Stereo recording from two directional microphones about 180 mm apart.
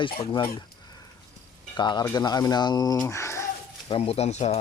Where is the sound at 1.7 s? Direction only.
25° left (ahead or behind).